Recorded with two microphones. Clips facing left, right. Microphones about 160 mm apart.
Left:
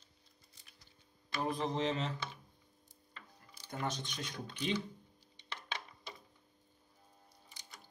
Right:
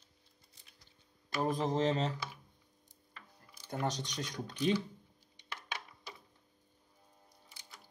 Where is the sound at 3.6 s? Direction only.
40° right (ahead or behind).